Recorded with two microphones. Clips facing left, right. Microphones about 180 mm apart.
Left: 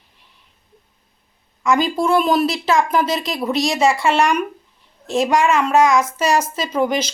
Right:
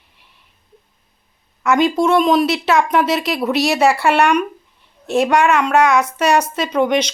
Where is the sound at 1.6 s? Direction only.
Centre (ahead or behind).